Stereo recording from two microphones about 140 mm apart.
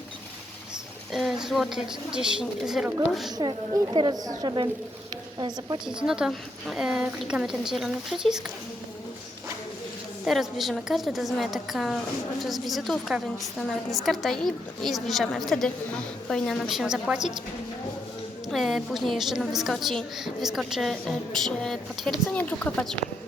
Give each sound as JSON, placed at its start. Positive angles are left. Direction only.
{"t": 1.1, "sound": "a woman's voice", "side_deg": 0}
{"t": 3.3, "sound": "a woman's voice", "side_deg": -30}
{"t": 5.8, "sound": "a woman's voice", "side_deg": -5}
{"t": 10.2, "sound": "a woman's voice", "side_deg": 0}
{"t": 18.4, "sound": "a woman's voice", "side_deg": 0}